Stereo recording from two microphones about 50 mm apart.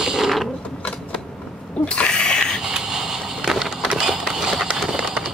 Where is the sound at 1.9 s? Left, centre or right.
Centre.